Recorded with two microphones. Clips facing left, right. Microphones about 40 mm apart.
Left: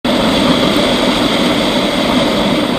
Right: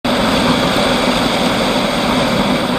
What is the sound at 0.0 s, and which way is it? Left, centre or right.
Vehicle, left.